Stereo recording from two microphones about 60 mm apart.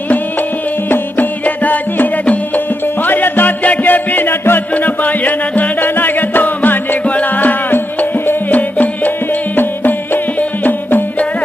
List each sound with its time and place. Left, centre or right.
0.9 s music: left